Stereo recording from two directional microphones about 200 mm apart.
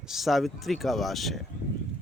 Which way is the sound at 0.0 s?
Centre (ahead or behind).